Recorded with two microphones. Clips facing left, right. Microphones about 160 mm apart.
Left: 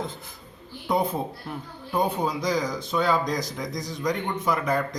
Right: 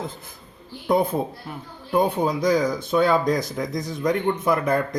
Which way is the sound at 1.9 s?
55° right (ahead or behind).